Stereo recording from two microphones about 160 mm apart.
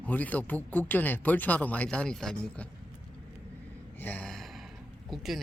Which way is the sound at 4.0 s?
10° left (ahead or behind).